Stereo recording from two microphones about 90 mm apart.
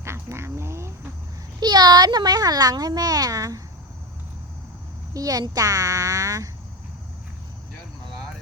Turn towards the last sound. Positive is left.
turn(degrees=-40)  # may be behind; listen again after turning